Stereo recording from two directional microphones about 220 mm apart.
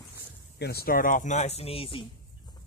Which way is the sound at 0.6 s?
45° left (ahead or behind).